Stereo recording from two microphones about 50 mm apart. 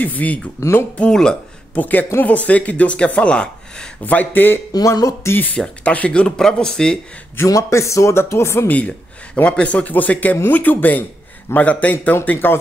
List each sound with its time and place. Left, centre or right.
0.0 s speech: left
0.6 s speech: left
1.1 s speech: centre
1.8 s speech: left; by 3.9 s centre
4.0 s speech: left
4.8 s speech: left
5.3 s speech: left
5.9 s speech: left
7.5 s speech: left
8.6 s speech: left
12.3 s speech: left